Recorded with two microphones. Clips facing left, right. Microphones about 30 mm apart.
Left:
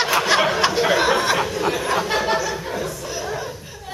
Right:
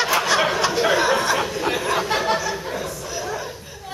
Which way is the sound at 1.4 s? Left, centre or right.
Centre.